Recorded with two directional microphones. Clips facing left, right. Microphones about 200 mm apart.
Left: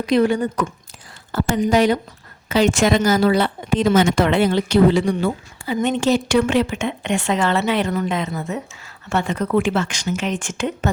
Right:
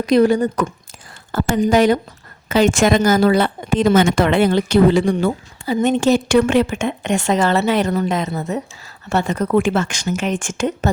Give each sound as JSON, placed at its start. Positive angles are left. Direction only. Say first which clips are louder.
{"t": 0.0, "sound": "speech", "louder": "right 3 dB", "side_deg": -40}